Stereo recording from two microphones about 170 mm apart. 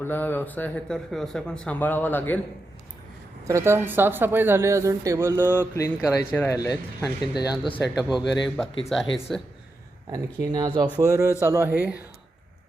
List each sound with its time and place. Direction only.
0.0 s a man's voice: 10° left (ahead or behind)
3.4 s speech: 15° right (ahead or behind)
5.5 s a man's voice: 15° left (ahead or behind)
7.9 s a man's voice: centre (ahead or behind)
10.1 s speech: 25° right (ahead or behind)